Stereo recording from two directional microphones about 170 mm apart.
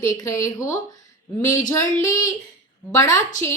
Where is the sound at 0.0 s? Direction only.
20° left (ahead or behind).